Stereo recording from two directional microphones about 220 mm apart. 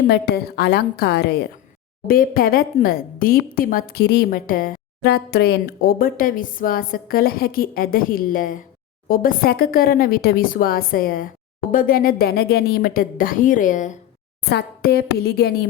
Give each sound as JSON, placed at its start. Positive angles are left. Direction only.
{"t": 0.1, "sound": "a woman's voice", "side_deg": 45}